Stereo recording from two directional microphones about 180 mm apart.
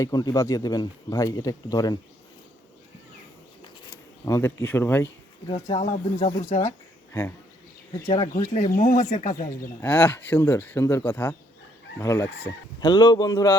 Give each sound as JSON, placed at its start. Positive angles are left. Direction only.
{"t": 0.0, "sound": "speech", "side_deg": 20}
{"t": 4.3, "sound": "speech", "side_deg": 15}
{"t": 5.5, "sound": "speech", "side_deg": 30}
{"t": 6.6, "sound": "speech", "side_deg": 15}
{"t": 8.0, "sound": "speech", "side_deg": 25}
{"t": 8.3, "sound": "speech", "side_deg": 45}
{"t": 9.8, "sound": "speech", "side_deg": 5}